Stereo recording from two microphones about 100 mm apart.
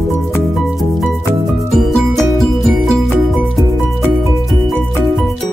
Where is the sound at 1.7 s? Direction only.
Centre (ahead or behind).